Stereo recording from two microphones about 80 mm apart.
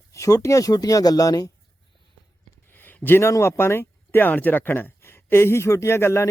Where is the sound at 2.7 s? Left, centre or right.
Left.